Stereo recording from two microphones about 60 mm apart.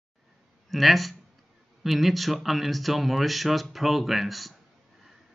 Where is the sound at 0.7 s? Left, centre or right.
Centre.